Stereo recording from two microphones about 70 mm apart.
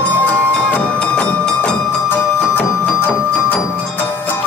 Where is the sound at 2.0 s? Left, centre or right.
Left.